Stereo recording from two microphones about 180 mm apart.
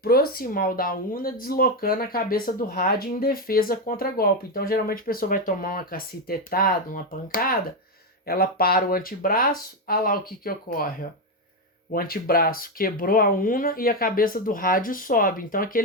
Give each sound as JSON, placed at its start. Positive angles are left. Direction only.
{"t": 0.0, "sound": "speech", "side_deg": 55}